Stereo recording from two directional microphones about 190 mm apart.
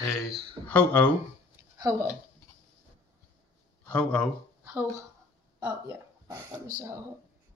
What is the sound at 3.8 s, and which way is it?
Speech, 5° left (ahead or behind).